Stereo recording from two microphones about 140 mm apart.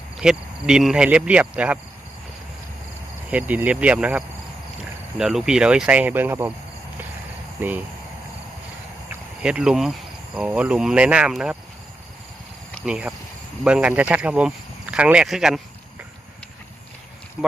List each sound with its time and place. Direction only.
0.2 s speech: 5° right (ahead or behind)
3.2 s speech: 10° right (ahead or behind)
7.6 s speech: 15° right (ahead or behind)
9.4 s speech: 5° right (ahead or behind)
12.8 s speech: 5° right (ahead or behind)